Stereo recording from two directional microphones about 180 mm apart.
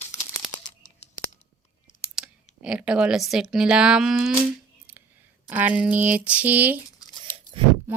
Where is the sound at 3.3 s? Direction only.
5° right (ahead or behind).